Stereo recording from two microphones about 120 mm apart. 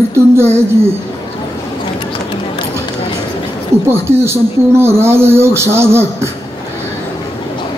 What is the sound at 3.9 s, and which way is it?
Speech, 20° right (ahead or behind).